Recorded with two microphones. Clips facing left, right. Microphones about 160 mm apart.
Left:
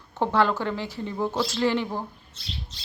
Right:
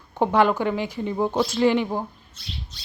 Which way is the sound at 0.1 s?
15° right (ahead or behind).